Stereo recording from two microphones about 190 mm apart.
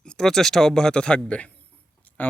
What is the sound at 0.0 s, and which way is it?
Speech, 5° left (ahead or behind).